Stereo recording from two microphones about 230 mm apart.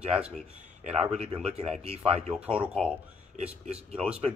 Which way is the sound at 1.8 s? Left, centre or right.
Right.